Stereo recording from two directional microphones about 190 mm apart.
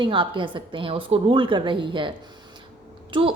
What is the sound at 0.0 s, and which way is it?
A woman's voice, 25° right (ahead or behind).